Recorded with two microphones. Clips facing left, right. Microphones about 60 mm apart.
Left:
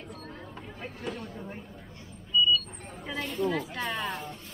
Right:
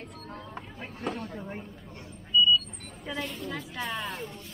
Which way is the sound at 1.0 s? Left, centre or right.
Right.